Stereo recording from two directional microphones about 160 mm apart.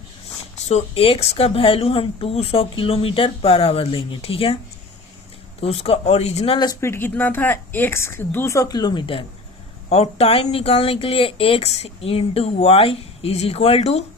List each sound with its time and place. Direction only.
0.6 s speech: 40° left (ahead or behind)
5.5 s speech: 40° left (ahead or behind)
6.8 s a woman's voice: 15° left (ahead or behind); by 14.0 s 40° left (ahead or behind)